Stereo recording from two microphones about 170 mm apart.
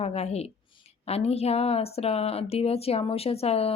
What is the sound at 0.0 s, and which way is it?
Speech, 40° left (ahead or behind).